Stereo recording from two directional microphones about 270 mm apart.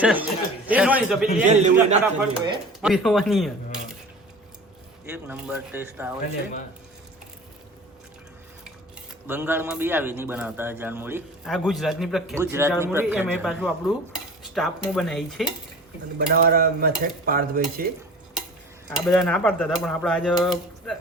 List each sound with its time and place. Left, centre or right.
0.0 s cutlery: centre
1.5 s a man's voice: right
2.8 s cutlery: centre
5.1 s a man's voice: centre
9.2 s a man's voice: centre
16.1 s stir: right
18.9 s cutlery: centre